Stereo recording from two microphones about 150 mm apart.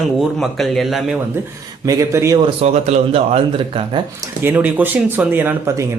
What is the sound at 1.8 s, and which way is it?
Speech, 20° right (ahead or behind).